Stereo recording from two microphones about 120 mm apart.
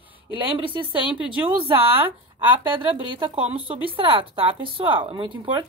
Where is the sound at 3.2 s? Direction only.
40° right (ahead or behind).